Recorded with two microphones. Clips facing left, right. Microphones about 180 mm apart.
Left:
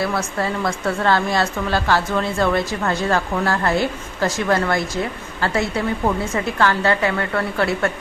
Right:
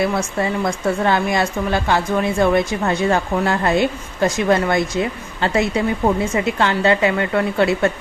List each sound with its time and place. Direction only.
0.3 s a woman's voice: 20° right (ahead or behind)